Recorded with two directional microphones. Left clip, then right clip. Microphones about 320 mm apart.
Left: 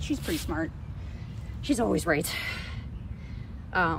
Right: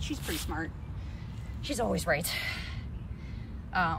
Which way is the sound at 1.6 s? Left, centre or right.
Centre.